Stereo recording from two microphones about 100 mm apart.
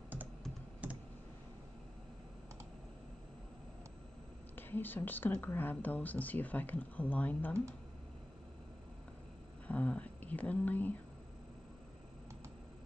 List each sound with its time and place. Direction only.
0.8 s computer keyboard: 15° right (ahead or behind)
4.6 s speech: 20° left (ahead or behind)
9.7 s a sound: 15° left (ahead or behind)